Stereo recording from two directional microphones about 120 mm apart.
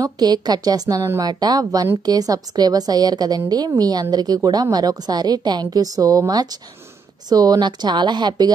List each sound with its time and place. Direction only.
0.0 s a woman's voice: 35° right (ahead or behind)